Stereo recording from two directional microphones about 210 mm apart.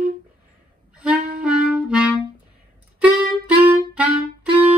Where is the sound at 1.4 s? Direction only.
5° right (ahead or behind).